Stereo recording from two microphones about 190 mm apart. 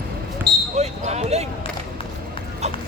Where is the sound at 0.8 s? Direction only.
35° right (ahead or behind).